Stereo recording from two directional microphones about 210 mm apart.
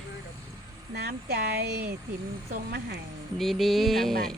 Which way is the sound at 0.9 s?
50° right (ahead or behind).